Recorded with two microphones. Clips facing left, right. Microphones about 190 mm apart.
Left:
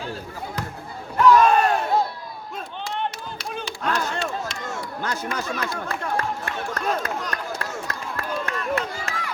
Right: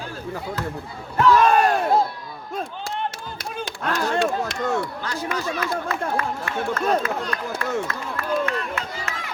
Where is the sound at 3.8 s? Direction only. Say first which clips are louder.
Right 4 dB; 50° right (ahead or behind).